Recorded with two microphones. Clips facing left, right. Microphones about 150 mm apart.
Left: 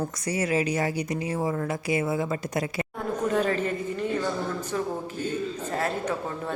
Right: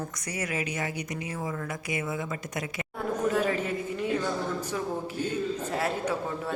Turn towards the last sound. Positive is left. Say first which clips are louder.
# left 1 dB
turn(degrees=-10)  # may be behind; listen again after turning